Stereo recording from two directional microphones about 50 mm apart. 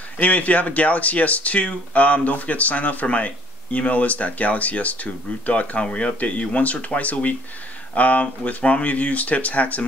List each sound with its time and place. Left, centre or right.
0.2 s speech: left